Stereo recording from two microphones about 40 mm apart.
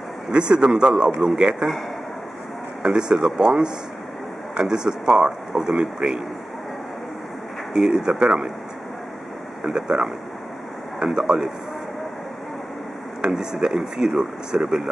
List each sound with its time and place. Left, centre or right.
0.3 s speech: right
2.8 s speech: right
7.7 s speech: centre
9.6 s speech: right
13.3 s speech: centre